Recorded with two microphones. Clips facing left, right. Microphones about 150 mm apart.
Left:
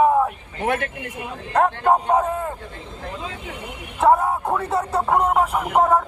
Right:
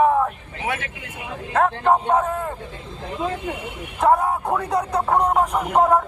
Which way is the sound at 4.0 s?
Centre (ahead or behind).